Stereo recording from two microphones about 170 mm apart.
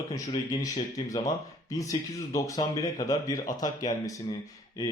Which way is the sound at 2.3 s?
20° left (ahead or behind).